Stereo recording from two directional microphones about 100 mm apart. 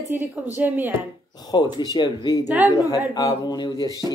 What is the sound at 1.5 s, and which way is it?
Speech, 45° left (ahead or behind).